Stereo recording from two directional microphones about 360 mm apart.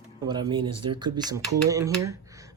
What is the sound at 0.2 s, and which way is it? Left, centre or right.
Speech, centre.